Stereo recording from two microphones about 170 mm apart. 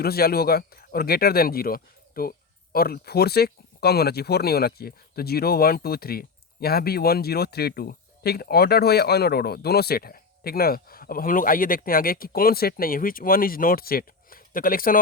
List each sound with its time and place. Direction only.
0.0 s speech: 65° left (ahead or behind)